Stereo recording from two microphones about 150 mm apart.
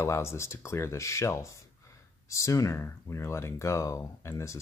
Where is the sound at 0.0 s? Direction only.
20° left (ahead or behind).